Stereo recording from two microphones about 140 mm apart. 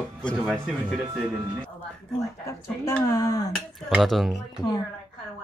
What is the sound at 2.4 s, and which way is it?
Speech, 20° left (ahead or behind).